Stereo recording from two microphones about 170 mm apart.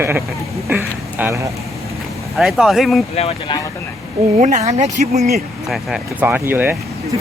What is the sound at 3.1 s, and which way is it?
Speech, 35° left (ahead or behind).